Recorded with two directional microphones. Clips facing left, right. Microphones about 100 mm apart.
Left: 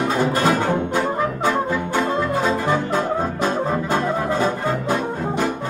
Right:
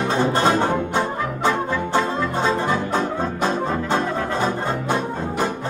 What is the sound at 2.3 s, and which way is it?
Music, 30° right (ahead or behind).